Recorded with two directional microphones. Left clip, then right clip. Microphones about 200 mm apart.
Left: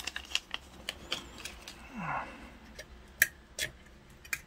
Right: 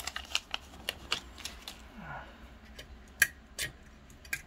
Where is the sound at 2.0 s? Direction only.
35° left (ahead or behind).